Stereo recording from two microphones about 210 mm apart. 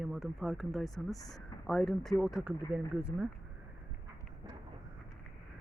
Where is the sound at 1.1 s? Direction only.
15° left (ahead or behind).